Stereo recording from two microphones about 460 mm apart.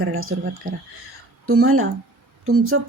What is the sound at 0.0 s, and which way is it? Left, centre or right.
Speech, right.